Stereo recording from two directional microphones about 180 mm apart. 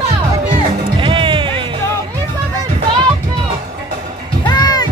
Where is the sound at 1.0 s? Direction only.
30° right (ahead or behind).